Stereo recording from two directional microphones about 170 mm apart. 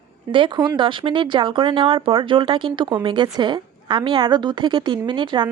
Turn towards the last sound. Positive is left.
turn(degrees=-30)  # may be behind; listen again after turning